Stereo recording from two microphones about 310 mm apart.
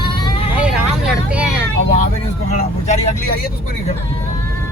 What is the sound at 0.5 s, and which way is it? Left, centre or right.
Speech, centre.